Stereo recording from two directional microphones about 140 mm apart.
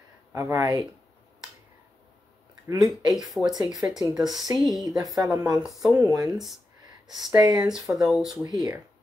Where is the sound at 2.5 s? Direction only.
25° right (ahead or behind).